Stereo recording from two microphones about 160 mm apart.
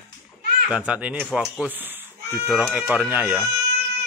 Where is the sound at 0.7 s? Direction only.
5° right (ahead or behind).